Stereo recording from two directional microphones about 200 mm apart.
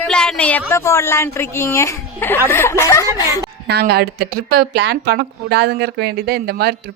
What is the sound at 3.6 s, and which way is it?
A woman's voice, 55° right (ahead or behind).